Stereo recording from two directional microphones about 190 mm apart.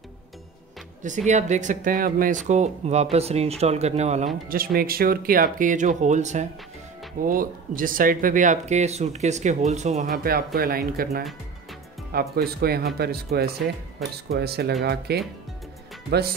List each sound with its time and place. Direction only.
1.0 s speech: 40° right (ahead or behind)
4.5 s speech: 50° right (ahead or behind)
10.0 s speech: 50° right (ahead or behind)
14.0 s speech: centre (ahead or behind)
14.3 s speech: 55° right (ahead or behind)